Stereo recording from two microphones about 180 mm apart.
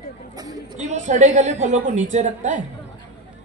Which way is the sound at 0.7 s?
40° right (ahead or behind).